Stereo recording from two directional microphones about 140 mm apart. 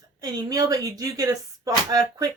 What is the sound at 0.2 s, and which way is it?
Speech, 25° right (ahead or behind).